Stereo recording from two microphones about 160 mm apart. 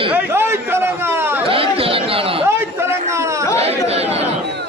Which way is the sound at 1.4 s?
35° right (ahead or behind).